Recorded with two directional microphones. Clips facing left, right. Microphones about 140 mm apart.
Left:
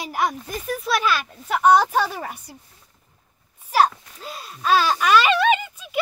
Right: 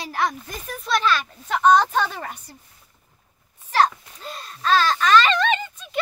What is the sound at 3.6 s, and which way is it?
Wail, 10° left (ahead or behind).